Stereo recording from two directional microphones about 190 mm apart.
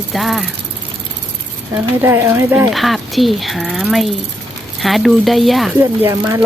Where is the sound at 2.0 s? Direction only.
10° right (ahead or behind).